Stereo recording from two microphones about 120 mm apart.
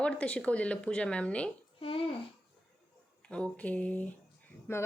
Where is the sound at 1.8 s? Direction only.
50° left (ahead or behind).